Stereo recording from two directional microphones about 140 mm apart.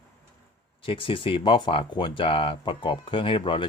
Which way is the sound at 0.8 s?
40° left (ahead or behind).